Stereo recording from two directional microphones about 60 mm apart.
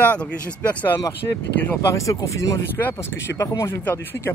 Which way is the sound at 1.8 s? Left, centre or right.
Left.